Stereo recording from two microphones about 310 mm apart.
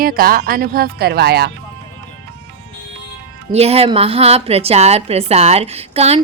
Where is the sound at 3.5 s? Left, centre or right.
Centre.